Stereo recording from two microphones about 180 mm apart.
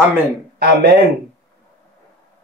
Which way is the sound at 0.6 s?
60° right (ahead or behind).